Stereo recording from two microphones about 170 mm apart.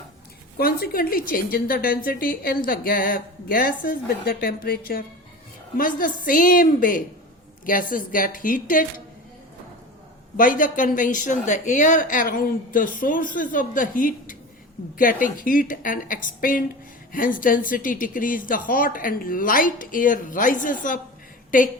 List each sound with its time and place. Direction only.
0.5 s a woman's voice: 60° left (ahead or behind)
10.3 s a woman's voice: 55° left (ahead or behind)